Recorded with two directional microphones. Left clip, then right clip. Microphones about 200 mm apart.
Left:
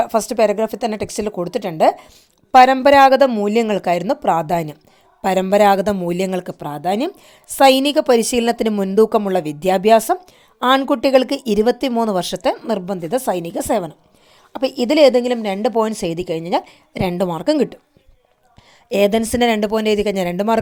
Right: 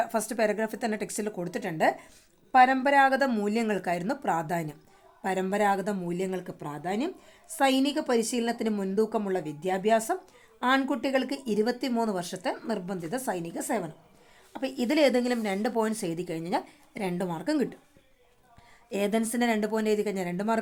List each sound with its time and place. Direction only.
0.0 s a woman's voice: 30° left (ahead or behind)
18.9 s a woman's voice: 35° left (ahead or behind)